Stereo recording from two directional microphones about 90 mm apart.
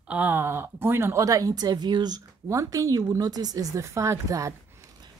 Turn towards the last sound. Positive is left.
turn(degrees=-35)  # may be behind; listen again after turning